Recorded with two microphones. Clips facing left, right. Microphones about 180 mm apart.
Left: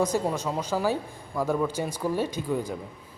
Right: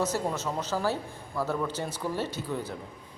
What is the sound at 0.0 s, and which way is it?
Speech, 15° left (ahead or behind).